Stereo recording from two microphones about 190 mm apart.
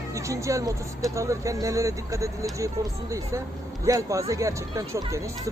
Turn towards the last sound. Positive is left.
turn(degrees=-15)  # may be behind; listen again after turning